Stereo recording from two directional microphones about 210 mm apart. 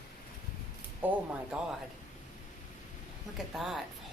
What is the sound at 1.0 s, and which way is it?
Speech, 5° right (ahead or behind).